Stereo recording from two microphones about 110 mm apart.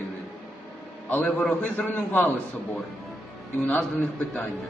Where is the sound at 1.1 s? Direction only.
15° left (ahead or behind).